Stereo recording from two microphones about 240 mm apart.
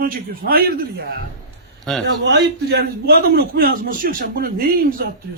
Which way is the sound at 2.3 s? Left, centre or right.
Right.